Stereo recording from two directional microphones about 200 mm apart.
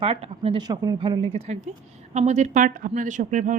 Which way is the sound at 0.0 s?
30° right (ahead or behind).